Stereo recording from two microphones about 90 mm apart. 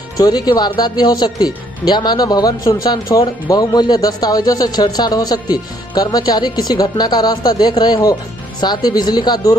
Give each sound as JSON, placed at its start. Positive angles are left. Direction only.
{"t": 0.2, "sound": "speech", "side_deg": 50}